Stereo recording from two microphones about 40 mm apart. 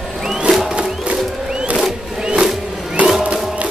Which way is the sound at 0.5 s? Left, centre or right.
Centre.